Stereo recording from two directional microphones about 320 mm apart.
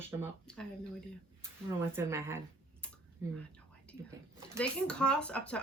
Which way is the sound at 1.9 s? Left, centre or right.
Centre.